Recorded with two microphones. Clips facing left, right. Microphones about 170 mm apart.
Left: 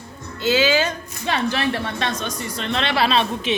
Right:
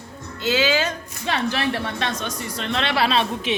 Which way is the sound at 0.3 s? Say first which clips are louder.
Left 2 dB; 5° left (ahead or behind).